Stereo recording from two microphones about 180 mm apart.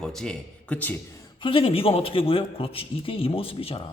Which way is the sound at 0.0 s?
5° left (ahead or behind).